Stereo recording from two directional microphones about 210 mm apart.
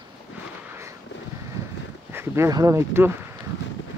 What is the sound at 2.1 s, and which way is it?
Speech, 10° right (ahead or behind).